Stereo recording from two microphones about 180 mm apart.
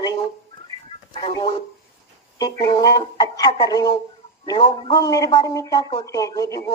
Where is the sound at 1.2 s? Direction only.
25° left (ahead or behind).